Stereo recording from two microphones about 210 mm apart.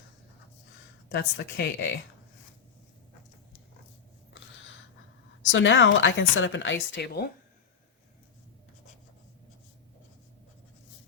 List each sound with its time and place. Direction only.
1.1 s a woman's voice: 55° left (ahead or behind)
4.4 s a sound: 65° left (ahead or behind)
5.4 s a woman's voice: 65° left (ahead or behind)